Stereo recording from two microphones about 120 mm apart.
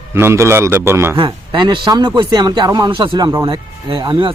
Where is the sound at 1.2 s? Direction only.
40° right (ahead or behind).